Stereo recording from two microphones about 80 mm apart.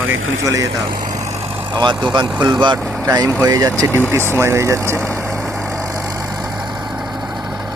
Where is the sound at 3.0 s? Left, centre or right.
Right.